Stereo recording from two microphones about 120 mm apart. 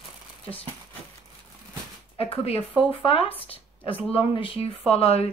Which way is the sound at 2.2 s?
55° left (ahead or behind).